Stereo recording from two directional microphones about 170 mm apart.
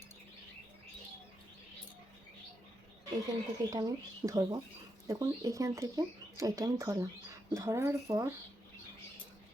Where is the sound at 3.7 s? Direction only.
20° right (ahead or behind).